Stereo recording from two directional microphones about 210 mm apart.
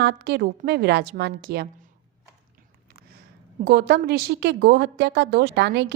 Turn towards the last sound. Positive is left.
turn(degrees=-55)  # may be behind; listen again after turning